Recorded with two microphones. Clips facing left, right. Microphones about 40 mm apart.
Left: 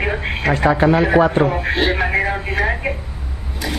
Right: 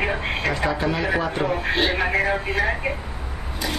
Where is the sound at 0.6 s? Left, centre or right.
Left.